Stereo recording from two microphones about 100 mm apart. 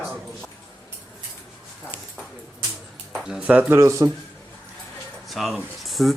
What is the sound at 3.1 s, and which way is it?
Speech, 5° right (ahead or behind).